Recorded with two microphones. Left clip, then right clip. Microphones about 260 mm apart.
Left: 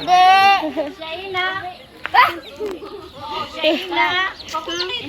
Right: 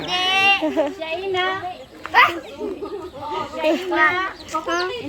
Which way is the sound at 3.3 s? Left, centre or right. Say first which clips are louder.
Left 1 dB; right.